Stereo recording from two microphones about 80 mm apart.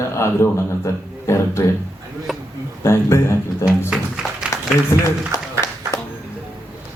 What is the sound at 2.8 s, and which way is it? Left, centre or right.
Speech, left.